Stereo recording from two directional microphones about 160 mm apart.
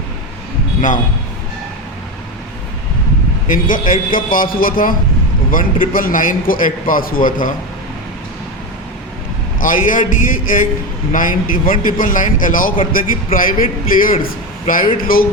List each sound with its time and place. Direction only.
3.4 s a man's voice: 55° left (ahead or behind)
9.6 s a man's voice: 55° left (ahead or behind)